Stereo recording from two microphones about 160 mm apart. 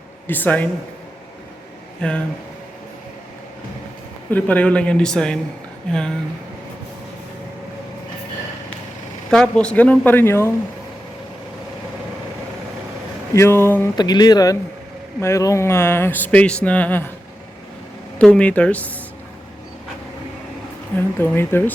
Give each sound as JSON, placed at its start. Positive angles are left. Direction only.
{"t": 0.3, "sound": "speech", "side_deg": 10}
{"t": 2.0, "sound": "speech", "side_deg": 5}
{"t": 4.3, "sound": "speech", "side_deg": 10}
{"t": 9.3, "sound": "speech", "side_deg": 5}
{"t": 13.3, "sound": "speech", "side_deg": 15}
{"t": 13.9, "sound": "speech", "side_deg": 25}
{"t": 18.2, "sound": "speech", "side_deg": 10}
{"t": 21.3, "sound": "speech", "side_deg": 15}